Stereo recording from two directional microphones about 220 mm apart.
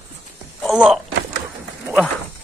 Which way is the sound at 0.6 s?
5° right (ahead or behind).